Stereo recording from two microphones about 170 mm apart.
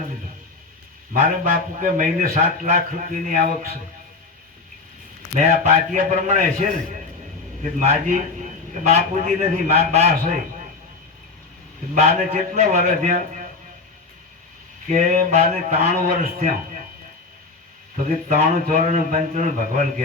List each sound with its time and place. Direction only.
1.1 s a man's voice: 50° right (ahead or behind)
5.3 s a man's voice: 45° right (ahead or behind)
7.8 s a man's voice: 50° right (ahead or behind)
11.9 s a man's voice: 45° right (ahead or behind)
14.8 s a man's voice: 45° right (ahead or behind)
17.9 s a man's voice: 50° right (ahead or behind)